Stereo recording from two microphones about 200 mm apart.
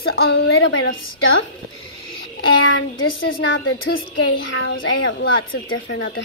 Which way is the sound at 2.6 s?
75° left (ahead or behind).